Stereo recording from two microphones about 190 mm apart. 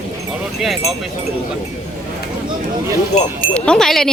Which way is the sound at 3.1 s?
35° left (ahead or behind).